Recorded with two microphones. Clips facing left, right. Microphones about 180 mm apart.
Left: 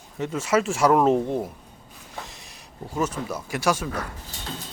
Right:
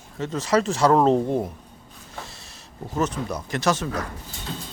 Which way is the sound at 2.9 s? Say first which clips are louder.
Right 1 dB; 10° left (ahead or behind).